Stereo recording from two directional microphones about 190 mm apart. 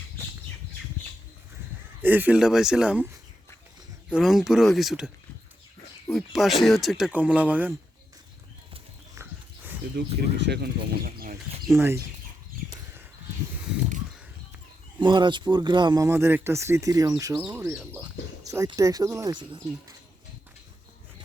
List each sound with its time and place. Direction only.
2.0 s speech: 10° right (ahead or behind)
4.1 s speech: centre (ahead or behind)
9.9 s speech: 65° right (ahead or behind)
15.0 s speech: 25° right (ahead or behind)